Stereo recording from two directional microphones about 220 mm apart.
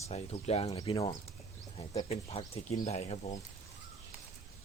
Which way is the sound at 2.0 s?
25° left (ahead or behind).